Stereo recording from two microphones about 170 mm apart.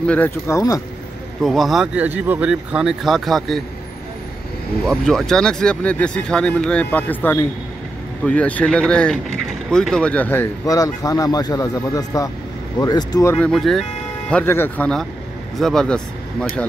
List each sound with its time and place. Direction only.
0.0 s speech: 10° left (ahead or behind)
1.4 s speech: centre (ahead or behind)
4.8 s speech: 5° left (ahead or behind)
13.5 s speech: centre (ahead or behind)
14.3 s speech: 15° left (ahead or behind)